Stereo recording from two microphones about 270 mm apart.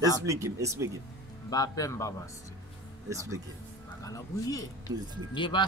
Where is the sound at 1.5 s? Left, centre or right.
Centre.